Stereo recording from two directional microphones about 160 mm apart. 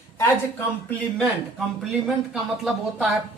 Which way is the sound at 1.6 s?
Centre (ahead or behind).